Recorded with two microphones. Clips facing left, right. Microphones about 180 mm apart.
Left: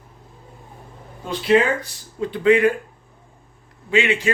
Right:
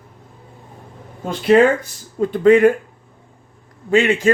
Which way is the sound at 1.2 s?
50° right (ahead or behind).